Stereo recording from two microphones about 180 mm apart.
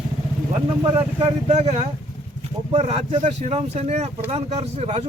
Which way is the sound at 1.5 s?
35° right (ahead or behind).